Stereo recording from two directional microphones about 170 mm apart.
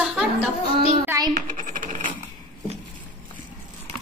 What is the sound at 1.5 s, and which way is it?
Coin, 55° right (ahead or behind).